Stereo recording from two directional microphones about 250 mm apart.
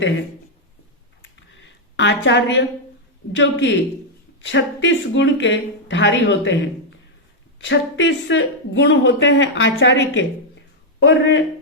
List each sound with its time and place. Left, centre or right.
1.2 s a sound: left
3.3 s speech: left
7.6 s speech: left